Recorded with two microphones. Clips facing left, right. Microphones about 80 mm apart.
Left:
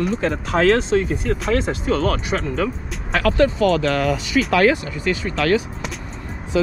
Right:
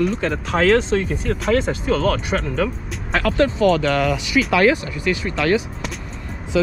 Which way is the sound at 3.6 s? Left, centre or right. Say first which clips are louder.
Right 1 dB; right.